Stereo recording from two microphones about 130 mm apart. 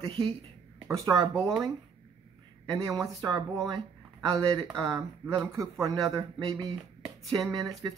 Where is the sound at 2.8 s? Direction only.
25° right (ahead or behind).